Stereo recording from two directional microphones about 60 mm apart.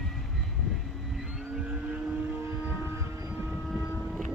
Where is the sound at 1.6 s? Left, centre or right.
Right.